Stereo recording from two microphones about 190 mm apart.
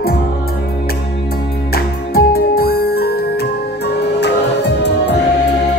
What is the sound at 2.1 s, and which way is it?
Music, 55° left (ahead or behind).